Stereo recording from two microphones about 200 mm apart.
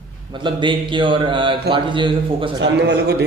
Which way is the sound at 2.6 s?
60° right (ahead or behind).